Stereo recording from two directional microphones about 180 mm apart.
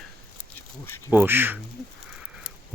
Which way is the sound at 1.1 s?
10° right (ahead or behind).